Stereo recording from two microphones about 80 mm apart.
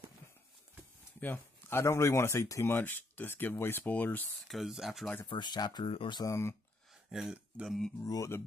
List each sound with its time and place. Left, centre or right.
1.2 s a sound: left
1.8 s speech: left
2.6 s speech: left
4.5 s speech: centre
5.2 s speech: left
6.2 s speech: left
7.1 s speech: centre
8.0 s speech: left